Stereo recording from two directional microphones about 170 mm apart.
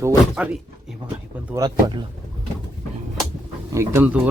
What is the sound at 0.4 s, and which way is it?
Speech, 5° right (ahead or behind).